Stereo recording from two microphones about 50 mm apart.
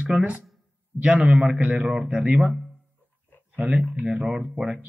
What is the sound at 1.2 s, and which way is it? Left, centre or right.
A man's voice, right.